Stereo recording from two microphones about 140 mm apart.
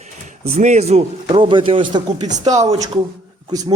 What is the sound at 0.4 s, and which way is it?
Speech, 75° right (ahead or behind).